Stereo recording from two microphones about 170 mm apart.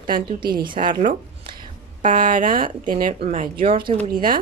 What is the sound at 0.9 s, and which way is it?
Speech, 50° right (ahead or behind).